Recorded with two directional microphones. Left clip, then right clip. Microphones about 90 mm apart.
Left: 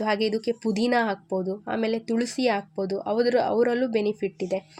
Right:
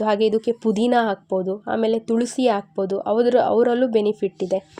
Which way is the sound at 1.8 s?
45° left (ahead or behind).